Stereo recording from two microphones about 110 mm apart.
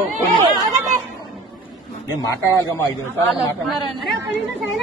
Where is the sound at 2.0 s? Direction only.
30° left (ahead or behind).